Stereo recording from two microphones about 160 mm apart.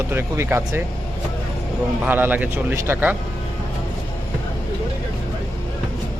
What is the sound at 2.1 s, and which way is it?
Speech, 10° right (ahead or behind).